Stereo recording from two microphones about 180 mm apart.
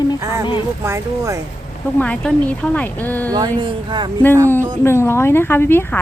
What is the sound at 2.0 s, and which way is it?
Speech, 5° left (ahead or behind).